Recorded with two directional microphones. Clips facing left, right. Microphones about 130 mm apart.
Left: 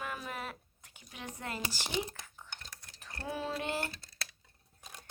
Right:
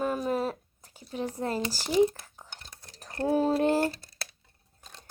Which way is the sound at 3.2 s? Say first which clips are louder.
Right 13 dB; 40° right (ahead or behind).